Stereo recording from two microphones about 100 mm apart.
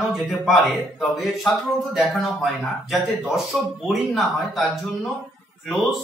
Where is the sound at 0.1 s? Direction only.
5° right (ahead or behind).